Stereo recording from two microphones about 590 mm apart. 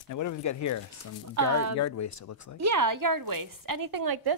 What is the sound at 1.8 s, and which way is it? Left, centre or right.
Speech, left.